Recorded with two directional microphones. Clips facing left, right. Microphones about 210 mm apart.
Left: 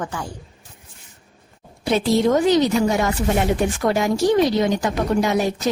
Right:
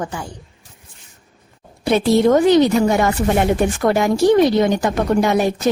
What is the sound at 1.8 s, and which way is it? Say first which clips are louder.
Speech: right 4 dB; 60° right (ahead or behind).